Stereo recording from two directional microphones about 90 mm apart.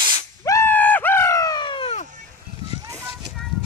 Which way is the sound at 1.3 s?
45° left (ahead or behind).